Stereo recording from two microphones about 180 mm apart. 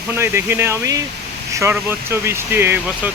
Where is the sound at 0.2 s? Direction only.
15° right (ahead or behind).